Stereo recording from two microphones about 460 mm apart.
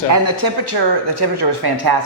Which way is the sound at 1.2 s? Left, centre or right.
Right.